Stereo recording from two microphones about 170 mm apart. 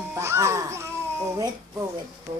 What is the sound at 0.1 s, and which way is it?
Speech, 15° right (ahead or behind).